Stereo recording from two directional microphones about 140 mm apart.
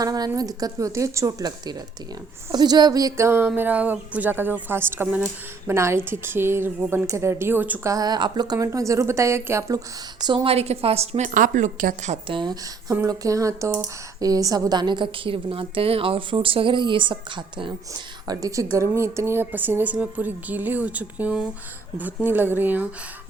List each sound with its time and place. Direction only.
0.0 s a woman's voice: 25° right (ahead or behind)
7.9 s a woman's voice: 30° right (ahead or behind); by 12.2 s 65° right (ahead or behind)
12.3 s a woman's voice: 35° right (ahead or behind)
12.9 s a woman's voice: 25° right (ahead or behind)